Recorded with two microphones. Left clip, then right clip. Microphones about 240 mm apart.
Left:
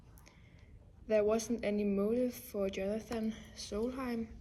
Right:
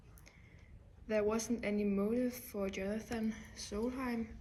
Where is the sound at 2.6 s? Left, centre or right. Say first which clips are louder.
Left 4 dB; centre.